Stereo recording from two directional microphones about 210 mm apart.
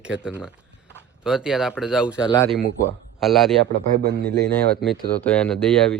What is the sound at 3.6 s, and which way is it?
Speech, 55° right (ahead or behind).